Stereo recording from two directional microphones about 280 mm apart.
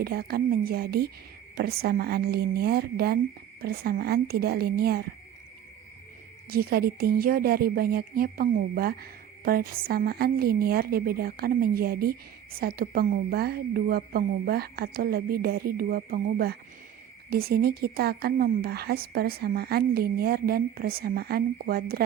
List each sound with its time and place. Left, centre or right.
0.0 s speech: right
6.5 s speech: right